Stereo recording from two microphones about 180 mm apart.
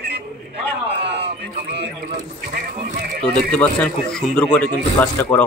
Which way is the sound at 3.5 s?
5° left (ahead or behind).